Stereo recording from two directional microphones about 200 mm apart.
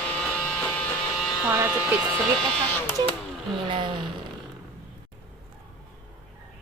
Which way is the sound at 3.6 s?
25° right (ahead or behind).